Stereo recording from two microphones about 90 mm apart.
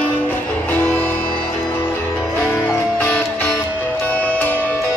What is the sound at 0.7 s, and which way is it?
Music, 20° left (ahead or behind).